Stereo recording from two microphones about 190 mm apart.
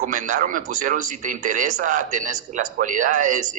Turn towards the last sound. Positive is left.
turn(degrees=-40)  # may be behind; listen again after turning